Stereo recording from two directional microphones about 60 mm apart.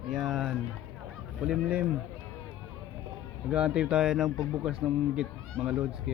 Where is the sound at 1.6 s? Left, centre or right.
Right.